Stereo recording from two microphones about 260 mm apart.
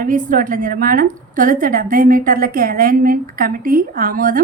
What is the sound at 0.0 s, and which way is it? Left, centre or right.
A woman's voice, right.